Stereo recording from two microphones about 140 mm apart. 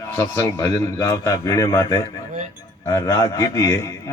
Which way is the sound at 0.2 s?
20° left (ahead or behind).